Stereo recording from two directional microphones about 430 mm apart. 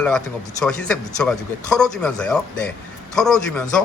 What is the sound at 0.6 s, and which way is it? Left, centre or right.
A man's voice, centre.